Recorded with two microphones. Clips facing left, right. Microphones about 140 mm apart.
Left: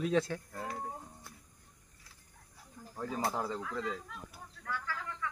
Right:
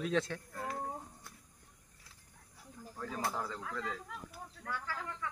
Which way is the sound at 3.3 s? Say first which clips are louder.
Left 4 dB; 20° left (ahead or behind).